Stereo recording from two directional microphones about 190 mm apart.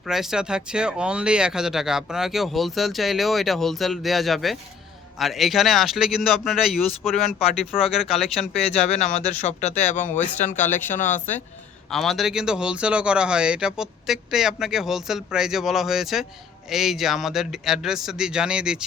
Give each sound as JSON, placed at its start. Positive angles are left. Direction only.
{"t": 0.1, "sound": "speech", "side_deg": 0}
{"t": 8.9, "sound": "speech", "side_deg": 35}
{"t": 11.9, "sound": "speech", "side_deg": 0}